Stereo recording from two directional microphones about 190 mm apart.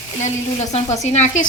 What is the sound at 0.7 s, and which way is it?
Speech, 35° left (ahead or behind).